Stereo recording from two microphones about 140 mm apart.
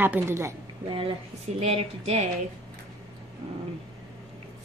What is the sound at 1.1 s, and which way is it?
Speech, 45° right (ahead or behind).